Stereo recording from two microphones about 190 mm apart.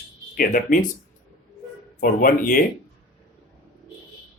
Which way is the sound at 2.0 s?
45° left (ahead or behind).